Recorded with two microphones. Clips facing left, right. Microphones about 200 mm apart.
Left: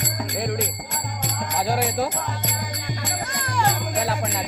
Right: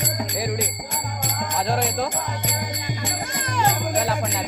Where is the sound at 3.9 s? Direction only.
Centre (ahead or behind).